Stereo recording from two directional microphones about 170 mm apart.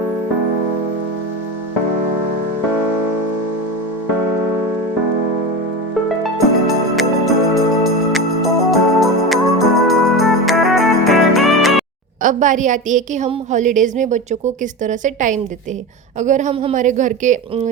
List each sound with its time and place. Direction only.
6.7 s music: centre (ahead or behind)
12.2 s a woman's voice: 50° right (ahead or behind)